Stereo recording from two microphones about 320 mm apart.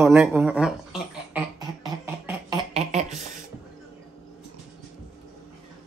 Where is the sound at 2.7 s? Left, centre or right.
Centre.